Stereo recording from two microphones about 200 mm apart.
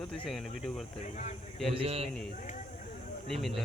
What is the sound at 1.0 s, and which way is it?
Speech, 35° left (ahead or behind).